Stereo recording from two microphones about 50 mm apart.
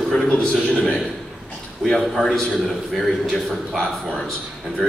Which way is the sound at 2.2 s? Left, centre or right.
Centre.